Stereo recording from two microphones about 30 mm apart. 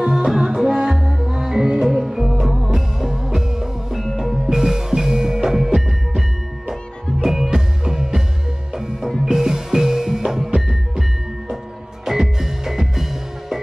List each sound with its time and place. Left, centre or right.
0.1 s music: centre
7.5 s music: centre
12.0 s music: centre